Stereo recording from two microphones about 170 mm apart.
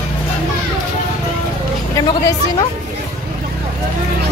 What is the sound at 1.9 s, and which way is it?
Speech, 20° left (ahead or behind).